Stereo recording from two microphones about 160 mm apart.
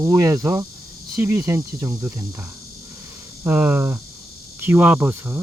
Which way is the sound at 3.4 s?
15° right (ahead or behind).